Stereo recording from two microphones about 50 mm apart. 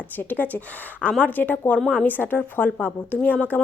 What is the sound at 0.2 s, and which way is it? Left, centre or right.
A woman's voice, left.